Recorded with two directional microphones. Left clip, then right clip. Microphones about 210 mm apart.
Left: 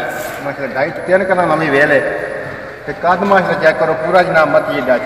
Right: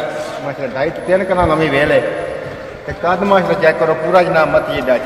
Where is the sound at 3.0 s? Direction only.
20° right (ahead or behind).